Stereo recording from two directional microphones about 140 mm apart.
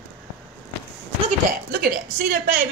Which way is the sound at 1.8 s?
90° right.